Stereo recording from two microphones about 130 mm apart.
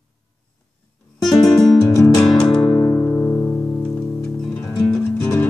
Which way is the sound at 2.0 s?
5° left (ahead or behind).